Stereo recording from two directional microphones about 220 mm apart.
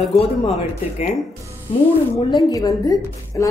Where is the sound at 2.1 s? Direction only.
15° left (ahead or behind).